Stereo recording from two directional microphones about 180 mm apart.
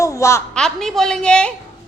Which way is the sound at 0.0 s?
15° left (ahead or behind).